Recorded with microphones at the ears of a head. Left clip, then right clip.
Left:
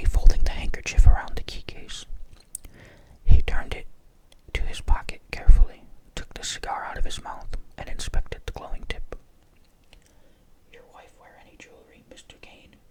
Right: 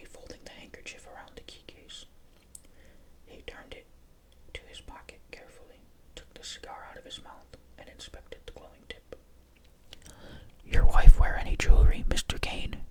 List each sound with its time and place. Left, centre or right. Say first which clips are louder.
0.0 s whispering: left 11 dB; left
9.9 s whispering: right 9 dB; right